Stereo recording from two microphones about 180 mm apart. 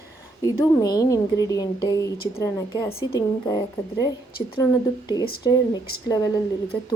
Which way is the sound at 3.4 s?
20° left (ahead or behind).